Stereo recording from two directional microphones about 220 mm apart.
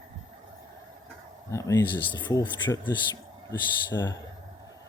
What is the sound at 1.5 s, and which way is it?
Speech, 15° left (ahead or behind).